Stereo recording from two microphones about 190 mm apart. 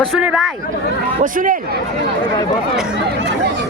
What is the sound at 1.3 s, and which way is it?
Speech, 45° right (ahead or behind).